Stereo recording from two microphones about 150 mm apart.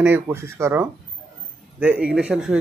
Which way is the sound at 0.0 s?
15° right (ahead or behind).